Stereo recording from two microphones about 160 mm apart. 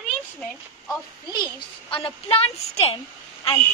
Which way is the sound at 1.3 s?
30° left (ahead or behind).